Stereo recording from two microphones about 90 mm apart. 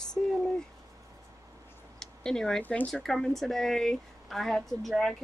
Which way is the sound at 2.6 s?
20° left (ahead or behind).